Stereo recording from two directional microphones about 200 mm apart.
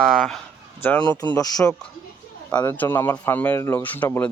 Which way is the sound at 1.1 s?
15° left (ahead or behind).